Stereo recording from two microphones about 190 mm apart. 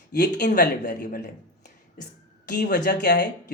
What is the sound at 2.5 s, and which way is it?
Speech, 55° left (ahead or behind).